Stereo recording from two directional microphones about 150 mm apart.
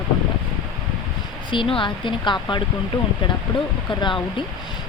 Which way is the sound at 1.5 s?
35° left (ahead or behind).